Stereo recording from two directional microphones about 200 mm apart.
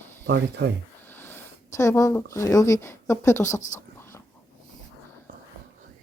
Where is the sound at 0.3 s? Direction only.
60° right (ahead or behind).